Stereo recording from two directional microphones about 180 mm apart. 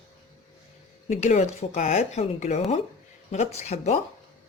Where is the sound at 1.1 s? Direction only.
40° left (ahead or behind).